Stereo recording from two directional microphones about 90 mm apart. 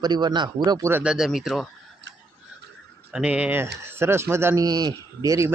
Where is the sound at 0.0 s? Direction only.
50° right (ahead or behind).